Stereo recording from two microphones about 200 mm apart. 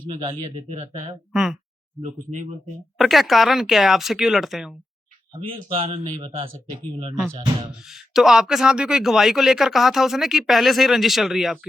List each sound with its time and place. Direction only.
0.1 s speech: 25° right (ahead or behind)
1.3 s speech: 5° right (ahead or behind)
2.0 s speech: 35° right (ahead or behind)
3.0 s speech: centre (ahead or behind)
5.3 s speech: 30° right (ahead or behind)
7.8 s speech: centre (ahead or behind)